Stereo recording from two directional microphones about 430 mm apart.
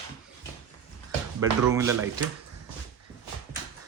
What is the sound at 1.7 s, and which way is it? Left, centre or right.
Speech, centre.